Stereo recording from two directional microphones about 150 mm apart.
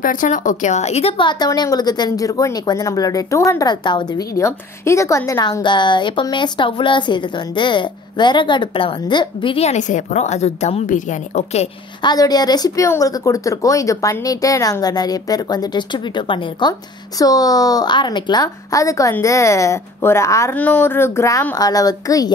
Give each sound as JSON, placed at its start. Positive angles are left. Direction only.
{"t": 0.0, "sound": "a woman's voice", "side_deg": 60}
{"t": 4.4, "sound": "a woman's voice", "side_deg": 20}
{"t": 12.0, "sound": "a woman's voice", "side_deg": 25}